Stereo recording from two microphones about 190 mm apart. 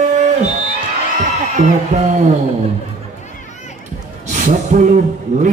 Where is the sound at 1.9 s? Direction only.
40° right (ahead or behind).